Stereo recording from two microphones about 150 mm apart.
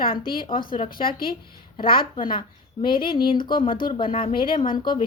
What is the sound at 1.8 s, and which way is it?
A woman's voice, 35° left (ahead or behind).